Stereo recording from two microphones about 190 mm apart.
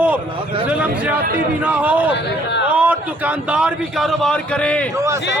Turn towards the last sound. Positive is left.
turn(degrees=5)  # may be behind; listen again after turning